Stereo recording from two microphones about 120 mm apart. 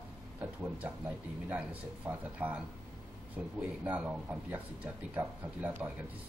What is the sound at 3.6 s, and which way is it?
Speech, 10° right (ahead or behind).